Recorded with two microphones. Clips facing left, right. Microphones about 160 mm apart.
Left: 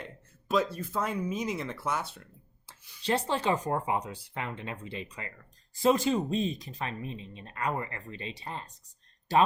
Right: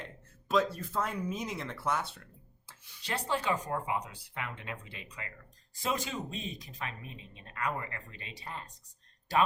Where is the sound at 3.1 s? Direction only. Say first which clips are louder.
Left 5 dB; 30° left (ahead or behind).